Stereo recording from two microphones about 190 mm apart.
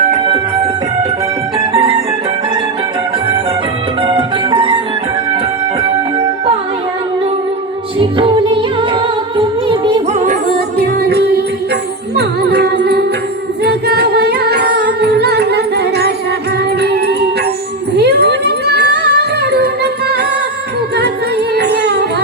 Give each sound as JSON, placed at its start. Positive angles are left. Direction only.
{"t": 1.5, "sound": "music", "side_deg": -30}
{"t": 4.0, "sound": "music", "side_deg": -25}
{"t": 7.9, "sound": "music", "side_deg": -25}
{"t": 10.8, "sound": "music", "side_deg": -55}
{"t": 21.5, "sound": "music", "side_deg": -60}